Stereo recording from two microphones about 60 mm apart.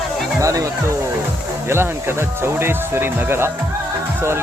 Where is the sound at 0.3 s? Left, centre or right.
Right.